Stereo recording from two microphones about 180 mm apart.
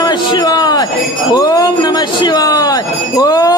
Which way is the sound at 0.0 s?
25° left (ahead or behind).